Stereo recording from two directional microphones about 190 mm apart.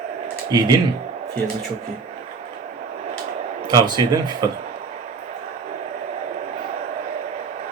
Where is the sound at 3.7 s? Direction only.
20° right (ahead or behind).